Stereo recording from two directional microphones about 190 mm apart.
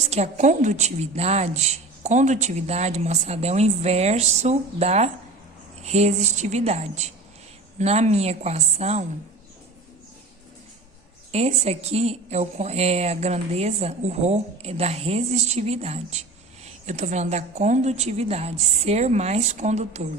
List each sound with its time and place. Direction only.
0.0 s a woman's voice: 35° right (ahead or behind)
11.3 s a woman's voice: 35° right (ahead or behind)